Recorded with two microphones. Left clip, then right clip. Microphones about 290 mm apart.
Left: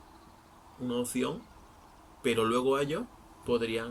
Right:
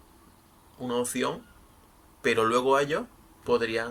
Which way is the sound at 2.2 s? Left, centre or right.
Centre.